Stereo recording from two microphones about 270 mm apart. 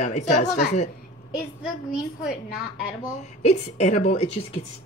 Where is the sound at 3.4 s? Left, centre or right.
Left.